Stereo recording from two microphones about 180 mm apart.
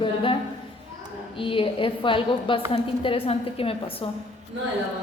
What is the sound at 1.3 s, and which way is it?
A woman's voice, 30° left (ahead or behind).